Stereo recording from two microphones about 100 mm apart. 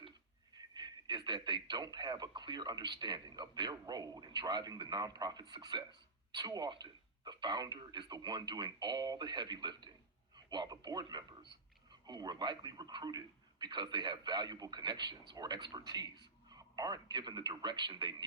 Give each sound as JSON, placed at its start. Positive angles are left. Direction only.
{"t": 0.5, "sound": "speech", "side_deg": -45}